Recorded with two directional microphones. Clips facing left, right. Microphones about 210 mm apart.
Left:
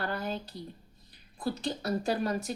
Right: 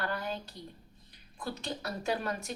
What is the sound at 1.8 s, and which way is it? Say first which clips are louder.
Speech: left 4 dB; 40° left (ahead or behind).